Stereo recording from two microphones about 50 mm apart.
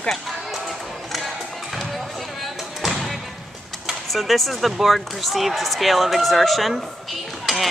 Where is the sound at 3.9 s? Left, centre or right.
Centre.